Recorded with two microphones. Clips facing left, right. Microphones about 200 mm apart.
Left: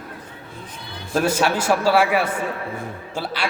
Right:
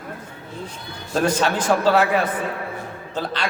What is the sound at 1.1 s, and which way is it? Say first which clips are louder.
A man's voice: even; 10° left (ahead or behind).